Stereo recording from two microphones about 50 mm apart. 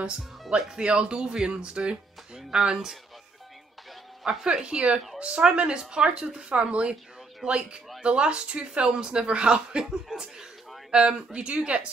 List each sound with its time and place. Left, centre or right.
0.7 s speech: centre
4.2 s speech: centre
4.5 s a woman's voice: right